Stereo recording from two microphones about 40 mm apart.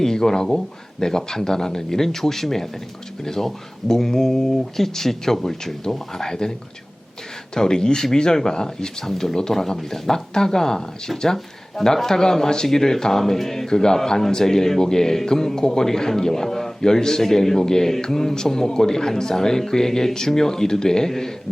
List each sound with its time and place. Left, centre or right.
0.0 s speech: centre
7.5 s speech: centre